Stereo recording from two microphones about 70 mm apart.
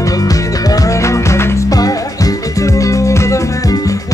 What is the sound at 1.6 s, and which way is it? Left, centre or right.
Music, left.